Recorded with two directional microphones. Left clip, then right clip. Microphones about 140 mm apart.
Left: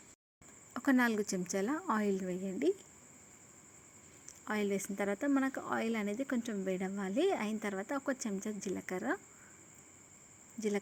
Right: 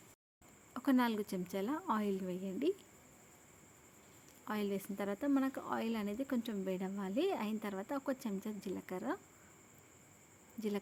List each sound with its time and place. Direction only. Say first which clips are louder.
0.7 s a woman's voice: left 3 dB; 20° left (ahead or behind)
4.3 s speech: left 4 dB; 15° left (ahead or behind)